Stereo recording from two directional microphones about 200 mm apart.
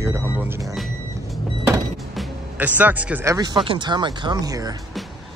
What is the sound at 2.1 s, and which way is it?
Speech, 5° right (ahead or behind).